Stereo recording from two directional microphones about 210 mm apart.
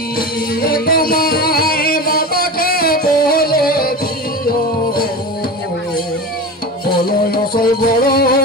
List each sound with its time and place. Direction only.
0.6 s music: 45° left (ahead or behind)
7.1 s music: 45° left (ahead or behind)